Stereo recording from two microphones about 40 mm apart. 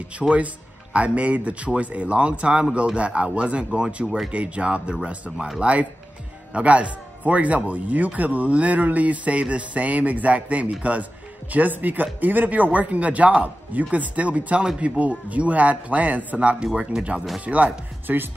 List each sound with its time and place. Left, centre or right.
0.2 s speech: centre
0.9 s speech: right
4.3 s speech: right
16.3 s speech: right
17.5 s speech: right
18.0 s speech: right